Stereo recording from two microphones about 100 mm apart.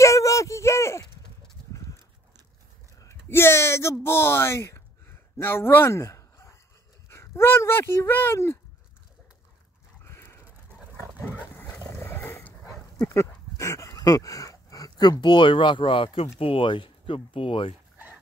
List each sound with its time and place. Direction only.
0.0 s a sound: 30° left (ahead or behind)
1.7 s livestock: 35° left (ahead or behind)
3.0 s speech: 25° left (ahead or behind)
10.0 s a sound: 25° left (ahead or behind)
11.5 s dog: 20° left (ahead or behind)
11.9 s roaring cats: 25° left (ahead or behind)
13.0 s speech: 30° left (ahead or behind); by 17.7 s 65° left (ahead or behind)